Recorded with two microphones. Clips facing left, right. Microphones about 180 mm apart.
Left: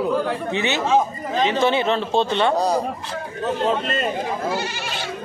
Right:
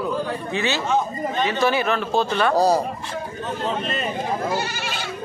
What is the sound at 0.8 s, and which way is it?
Speech, 90° left.